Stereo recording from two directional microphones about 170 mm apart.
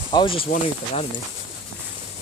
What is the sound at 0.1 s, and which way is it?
Speech, 30° left (ahead or behind).